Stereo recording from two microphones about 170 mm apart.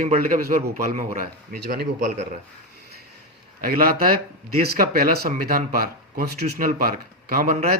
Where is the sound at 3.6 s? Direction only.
55° right (ahead or behind).